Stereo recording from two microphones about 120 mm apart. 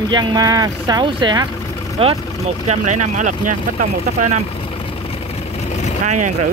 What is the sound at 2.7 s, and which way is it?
Speech, 80° right.